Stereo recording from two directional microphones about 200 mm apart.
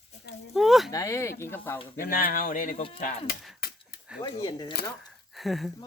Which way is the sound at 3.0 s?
40° left (ahead or behind).